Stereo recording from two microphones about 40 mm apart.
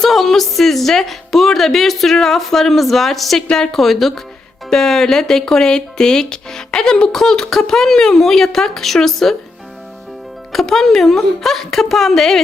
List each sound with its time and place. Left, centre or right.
0.0 s a woman's voice: centre
3.8 s a woman's voice: centre
10.5 s speech: centre